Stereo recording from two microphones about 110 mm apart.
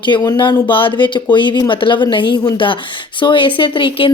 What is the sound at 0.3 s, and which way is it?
A woman's voice, 45° left (ahead or behind).